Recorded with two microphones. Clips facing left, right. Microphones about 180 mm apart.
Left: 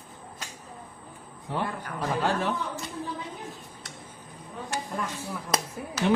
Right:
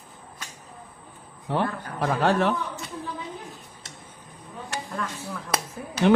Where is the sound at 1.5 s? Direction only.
70° right (ahead or behind).